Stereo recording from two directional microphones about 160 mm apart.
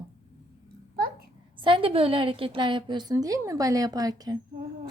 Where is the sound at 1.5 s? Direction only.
30° right (ahead or behind).